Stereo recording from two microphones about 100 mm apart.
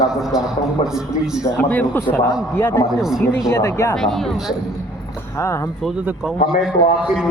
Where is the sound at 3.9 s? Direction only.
5° left (ahead or behind).